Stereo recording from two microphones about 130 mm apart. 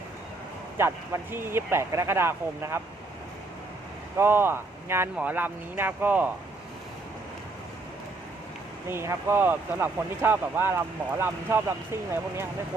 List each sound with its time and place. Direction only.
0.8 s speech: 20° right (ahead or behind)
4.2 s speech: 15° right (ahead or behind)
8.9 s speech: 20° right (ahead or behind)